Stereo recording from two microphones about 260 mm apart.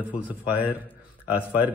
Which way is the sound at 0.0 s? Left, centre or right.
Centre.